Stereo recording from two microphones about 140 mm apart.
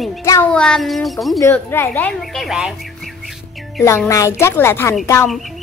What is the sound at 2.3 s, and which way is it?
Speech, centre (ahead or behind).